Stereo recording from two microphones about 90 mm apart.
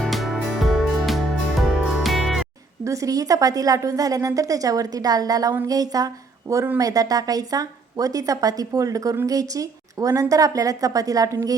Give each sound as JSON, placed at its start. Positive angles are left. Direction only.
{"t": 0.0, "sound": "music", "side_deg": 0}
{"t": 2.8, "sound": "a woman's voice", "side_deg": -35}